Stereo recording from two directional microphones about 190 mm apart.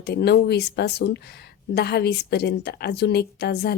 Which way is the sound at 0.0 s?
60° left (ahead or behind).